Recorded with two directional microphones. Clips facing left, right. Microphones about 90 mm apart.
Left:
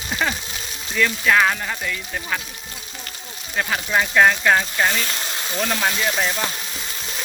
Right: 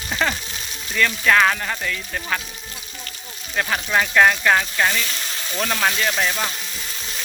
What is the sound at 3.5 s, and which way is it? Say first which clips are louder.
Speech: even; 5° left (ahead or behind).